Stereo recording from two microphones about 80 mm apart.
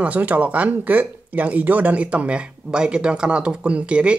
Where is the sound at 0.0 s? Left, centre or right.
Centre.